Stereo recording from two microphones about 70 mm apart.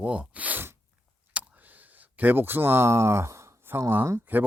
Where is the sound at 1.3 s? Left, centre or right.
Right.